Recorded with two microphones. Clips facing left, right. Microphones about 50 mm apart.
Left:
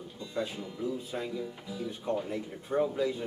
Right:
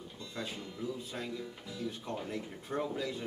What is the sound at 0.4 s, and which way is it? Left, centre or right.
Speech, centre.